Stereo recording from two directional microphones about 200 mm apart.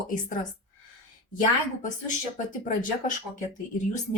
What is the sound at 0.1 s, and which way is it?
Speech, 40° left (ahead or behind).